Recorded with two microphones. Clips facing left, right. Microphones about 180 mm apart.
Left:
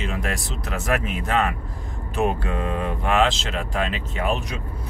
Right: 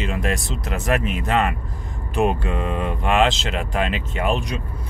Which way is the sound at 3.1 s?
Centre (ahead or behind).